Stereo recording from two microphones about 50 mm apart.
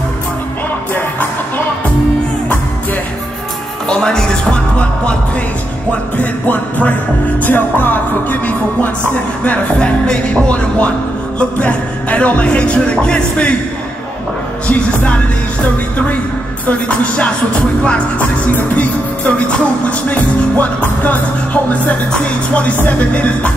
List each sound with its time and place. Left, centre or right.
3.9 s music: centre
5.9 s music: left
9.4 s speech: left
14.7 s speech: left
18.5 s speech: left
20.1 s music: left
22.1 s speech: left